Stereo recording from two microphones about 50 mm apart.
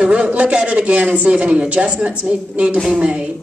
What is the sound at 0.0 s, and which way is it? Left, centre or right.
Speech, right.